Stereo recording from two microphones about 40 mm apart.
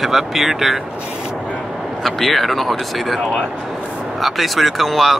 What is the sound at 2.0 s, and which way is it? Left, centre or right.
Speech, centre.